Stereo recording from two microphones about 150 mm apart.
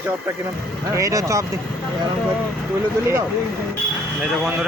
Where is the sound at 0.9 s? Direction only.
20° right (ahead or behind).